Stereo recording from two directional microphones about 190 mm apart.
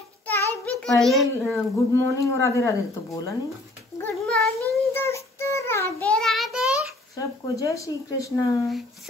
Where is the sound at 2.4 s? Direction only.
15° left (ahead or behind).